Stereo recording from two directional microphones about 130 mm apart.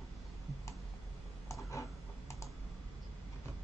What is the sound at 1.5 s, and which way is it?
Typing, 25° left (ahead or behind).